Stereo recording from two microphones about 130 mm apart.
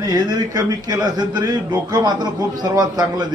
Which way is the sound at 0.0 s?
30° right (ahead or behind).